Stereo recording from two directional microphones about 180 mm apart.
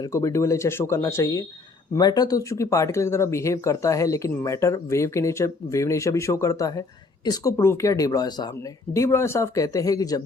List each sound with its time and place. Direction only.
0.0 s speech: 15° left (ahead or behind)